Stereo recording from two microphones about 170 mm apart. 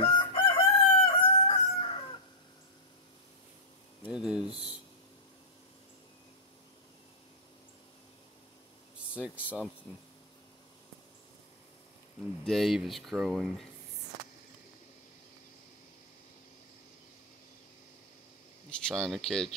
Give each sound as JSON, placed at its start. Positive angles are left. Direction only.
{"t": 0.0, "sound": "chicken", "side_deg": 30}
{"t": 4.0, "sound": "a sound", "side_deg": -5}
{"t": 9.1, "sound": "speech", "side_deg": -10}
{"t": 12.4, "sound": "speech", "side_deg": 0}
{"t": 18.7, "sound": "speech", "side_deg": 5}